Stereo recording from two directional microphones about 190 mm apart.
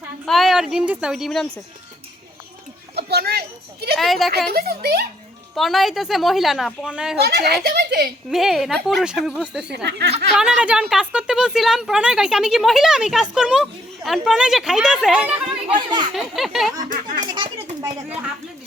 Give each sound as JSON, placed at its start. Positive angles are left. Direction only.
{"t": 0.3, "sound": "speech", "side_deg": 0}
{"t": 2.9, "sound": "children playing", "side_deg": -55}
{"t": 3.9, "sound": "speech", "side_deg": 0}
{"t": 4.5, "sound": "speech", "side_deg": -55}
{"t": 5.5, "sound": "speech", "side_deg": 0}
{"t": 7.2, "sound": "a child's voice", "side_deg": -60}
{"t": 8.3, "sound": "speech", "side_deg": 0}
{"t": 9.7, "sound": "a child's voice", "side_deg": -60}
{"t": 10.3, "sound": "speech", "side_deg": -5}
{"t": 15.7, "sound": "speech", "side_deg": -25}
{"t": 16.1, "sound": "speech", "side_deg": 0}
{"t": 16.9, "sound": "a sound", "side_deg": -45}